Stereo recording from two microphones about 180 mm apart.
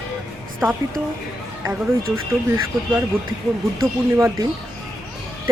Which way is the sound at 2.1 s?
15° right (ahead or behind).